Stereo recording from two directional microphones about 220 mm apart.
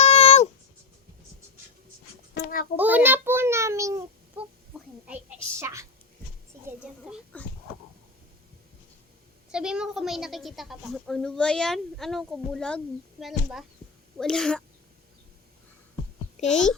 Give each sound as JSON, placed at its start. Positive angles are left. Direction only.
{"t": 0.0, "sound": "a sound", "side_deg": 30}
{"t": 2.3, "sound": "a sound", "side_deg": 45}
{"t": 2.7, "sound": "a child's voice", "side_deg": -5}
{"t": 5.0, "sound": "a woman's voice", "side_deg": -10}
{"t": 7.3, "sound": "speech", "side_deg": 5}
{"t": 9.5, "sound": "a woman's voice", "side_deg": -5}
{"t": 16.4, "sound": "a child's voice", "side_deg": 30}